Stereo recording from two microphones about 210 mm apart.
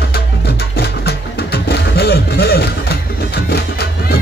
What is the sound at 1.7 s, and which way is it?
Music, 50° left (ahead or behind).